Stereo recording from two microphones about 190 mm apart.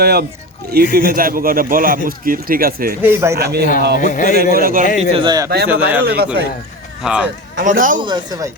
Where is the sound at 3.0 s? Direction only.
10° right (ahead or behind).